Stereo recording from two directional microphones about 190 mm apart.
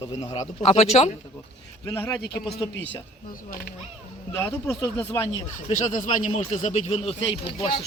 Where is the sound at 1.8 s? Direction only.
10° left (ahead or behind).